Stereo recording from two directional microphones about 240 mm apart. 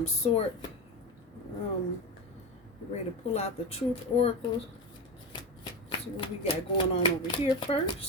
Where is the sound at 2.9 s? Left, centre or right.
Left.